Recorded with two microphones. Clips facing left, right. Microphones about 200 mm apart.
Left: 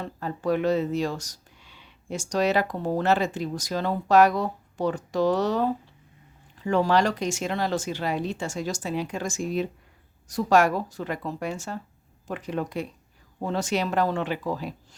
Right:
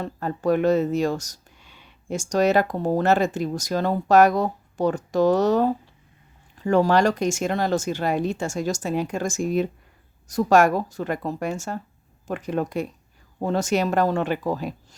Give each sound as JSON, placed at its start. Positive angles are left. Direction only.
{"t": 0.0, "sound": "speech", "side_deg": -50}